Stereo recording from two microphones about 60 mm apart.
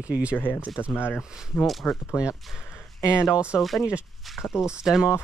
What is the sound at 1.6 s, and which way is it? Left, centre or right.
Speech, centre.